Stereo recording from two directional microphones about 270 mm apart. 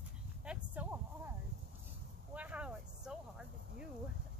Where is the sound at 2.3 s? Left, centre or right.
Centre.